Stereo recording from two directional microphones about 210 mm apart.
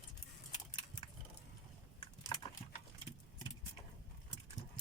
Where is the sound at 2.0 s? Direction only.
20° left (ahead or behind).